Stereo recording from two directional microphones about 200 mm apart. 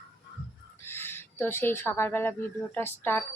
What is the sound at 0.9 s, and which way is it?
Speech, 10° left (ahead or behind).